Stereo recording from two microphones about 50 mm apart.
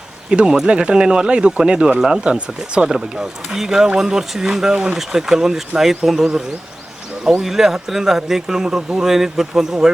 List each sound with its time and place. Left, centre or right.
0.3 s speech: centre
4.7 s speech: right
4.9 s speech: centre